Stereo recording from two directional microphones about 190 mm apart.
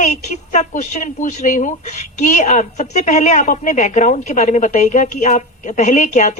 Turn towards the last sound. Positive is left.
turn(degrees=40)  # may be behind; listen again after turning